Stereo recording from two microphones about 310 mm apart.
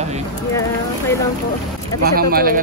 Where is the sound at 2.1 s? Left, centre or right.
Right.